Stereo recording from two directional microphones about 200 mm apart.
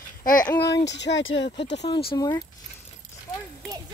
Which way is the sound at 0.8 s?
60° left (ahead or behind).